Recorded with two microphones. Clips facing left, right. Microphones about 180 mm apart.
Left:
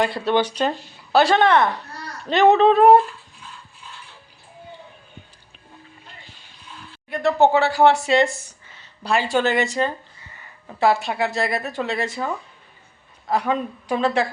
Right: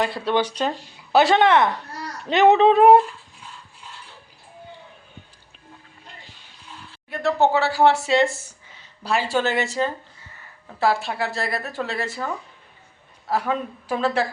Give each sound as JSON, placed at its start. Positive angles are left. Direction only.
{"t": 0.0, "sound": "speech", "side_deg": -5}
{"t": 1.1, "sound": "speech", "side_deg": -20}
{"t": 7.1, "sound": "speech", "side_deg": 0}
{"t": 9.3, "sound": "speech", "side_deg": -5}
{"t": 10.8, "sound": "speech", "side_deg": 0}